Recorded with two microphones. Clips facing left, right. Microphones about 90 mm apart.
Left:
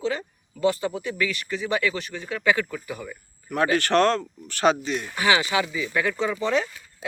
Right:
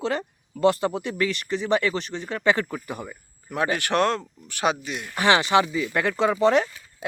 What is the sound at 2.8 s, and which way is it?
Speech, 50° right (ahead or behind).